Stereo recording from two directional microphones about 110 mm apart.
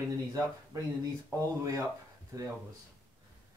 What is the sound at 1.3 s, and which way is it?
Speech, 30° right (ahead or behind).